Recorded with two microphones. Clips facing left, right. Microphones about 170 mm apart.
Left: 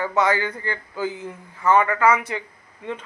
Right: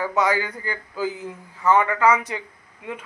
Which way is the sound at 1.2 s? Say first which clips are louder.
Even; 15° right (ahead or behind).